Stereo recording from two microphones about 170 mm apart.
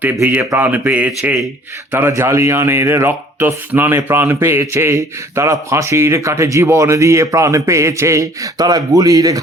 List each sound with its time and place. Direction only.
0.0 s speech: 10° right (ahead or behind)